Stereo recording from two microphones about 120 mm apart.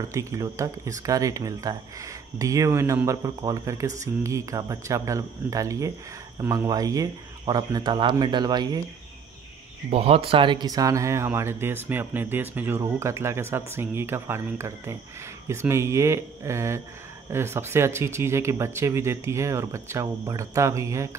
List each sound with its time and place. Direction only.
0.1 s speech: 25° right (ahead or behind)
9.8 s speech: 55° right (ahead or behind); by 21.2 s 25° right (ahead or behind)